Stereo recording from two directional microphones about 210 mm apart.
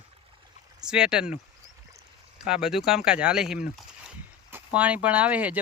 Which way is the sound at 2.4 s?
5° right (ahead or behind).